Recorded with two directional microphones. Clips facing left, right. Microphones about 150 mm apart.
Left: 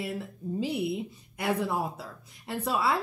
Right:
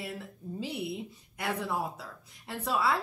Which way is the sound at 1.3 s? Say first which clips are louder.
Left 4 dB; 20° left (ahead or behind).